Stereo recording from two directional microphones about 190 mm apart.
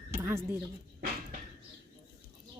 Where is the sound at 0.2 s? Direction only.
10° right (ahead or behind).